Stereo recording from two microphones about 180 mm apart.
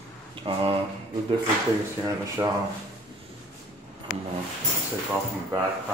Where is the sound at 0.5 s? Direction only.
35° right (ahead or behind).